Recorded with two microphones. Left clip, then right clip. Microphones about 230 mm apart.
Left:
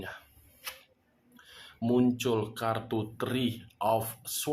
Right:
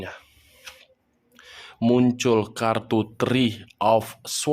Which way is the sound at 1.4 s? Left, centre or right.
Right.